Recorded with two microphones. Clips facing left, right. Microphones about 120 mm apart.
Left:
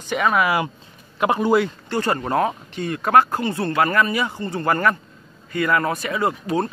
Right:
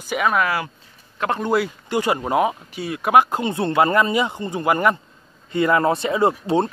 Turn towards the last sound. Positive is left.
turn(degrees=-25)  # may be behind; listen again after turning